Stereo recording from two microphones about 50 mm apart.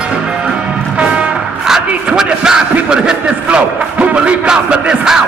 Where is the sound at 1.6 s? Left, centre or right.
Centre.